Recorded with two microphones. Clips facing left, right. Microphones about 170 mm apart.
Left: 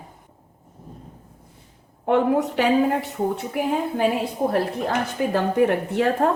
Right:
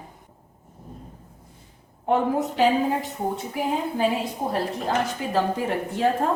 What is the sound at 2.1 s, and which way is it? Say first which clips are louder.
Speech: left 3 dB; 70° left (ahead or behind).